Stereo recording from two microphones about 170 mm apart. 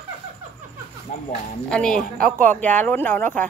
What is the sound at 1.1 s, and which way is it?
Speech, 45° left (ahead or behind).